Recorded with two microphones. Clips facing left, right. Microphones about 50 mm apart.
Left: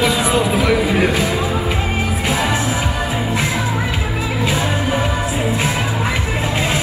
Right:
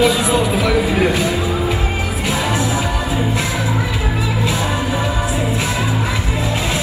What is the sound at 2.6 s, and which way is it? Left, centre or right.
Music, left.